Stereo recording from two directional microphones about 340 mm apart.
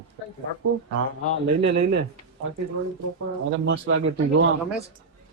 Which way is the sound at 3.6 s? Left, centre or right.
Right.